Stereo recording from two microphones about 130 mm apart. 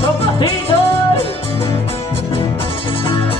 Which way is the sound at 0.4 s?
45° left (ahead or behind).